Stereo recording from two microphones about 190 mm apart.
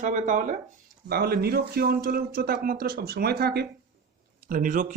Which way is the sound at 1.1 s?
55° right (ahead or behind).